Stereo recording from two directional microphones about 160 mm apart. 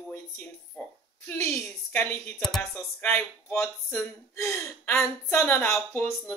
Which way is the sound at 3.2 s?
15° left (ahead or behind).